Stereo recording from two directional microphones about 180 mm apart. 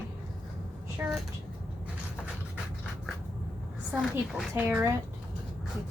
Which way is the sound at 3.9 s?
5° right (ahead or behind).